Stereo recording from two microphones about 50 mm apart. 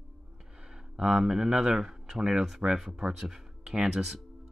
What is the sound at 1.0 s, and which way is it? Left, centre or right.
Speech, centre.